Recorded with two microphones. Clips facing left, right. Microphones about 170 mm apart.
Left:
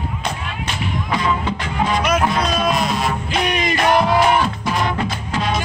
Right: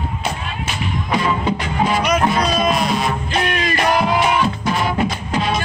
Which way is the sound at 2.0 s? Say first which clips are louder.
Right 1 dB; 5° left (ahead or behind).